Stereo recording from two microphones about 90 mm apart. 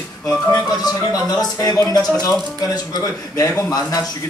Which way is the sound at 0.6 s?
45° left (ahead or behind).